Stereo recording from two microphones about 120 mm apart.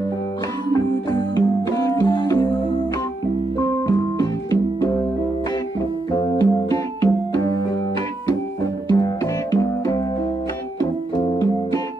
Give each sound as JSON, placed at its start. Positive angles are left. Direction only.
{"t": 0.7, "sound": "music", "side_deg": 35}
{"t": 3.6, "sound": "keyboard", "side_deg": 30}
{"t": 6.1, "sound": "keyboard", "side_deg": 30}
{"t": 8.9, "sound": "music", "side_deg": 30}